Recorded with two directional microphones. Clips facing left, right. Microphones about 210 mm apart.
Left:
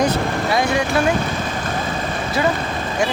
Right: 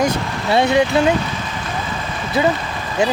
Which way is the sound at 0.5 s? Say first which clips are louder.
Right 6 dB; 25° right (ahead or behind).